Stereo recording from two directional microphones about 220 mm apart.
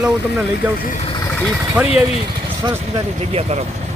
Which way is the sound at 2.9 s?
25° right (ahead or behind).